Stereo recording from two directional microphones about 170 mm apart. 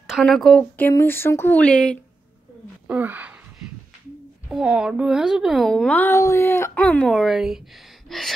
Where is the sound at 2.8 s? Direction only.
10° right (ahead or behind).